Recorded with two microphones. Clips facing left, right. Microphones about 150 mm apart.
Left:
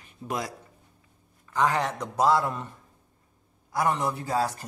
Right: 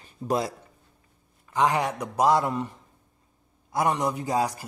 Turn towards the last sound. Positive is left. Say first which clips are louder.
# right 2 dB
turn(degrees=-15)  # may be behind; listen again after turning